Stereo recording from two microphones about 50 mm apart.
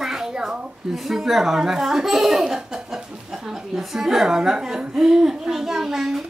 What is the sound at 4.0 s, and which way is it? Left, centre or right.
A child's voice, centre.